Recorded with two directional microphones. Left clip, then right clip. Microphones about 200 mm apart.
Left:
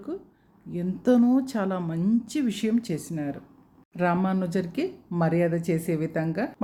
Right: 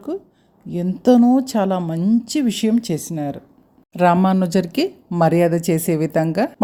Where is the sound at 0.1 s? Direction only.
35° right (ahead or behind).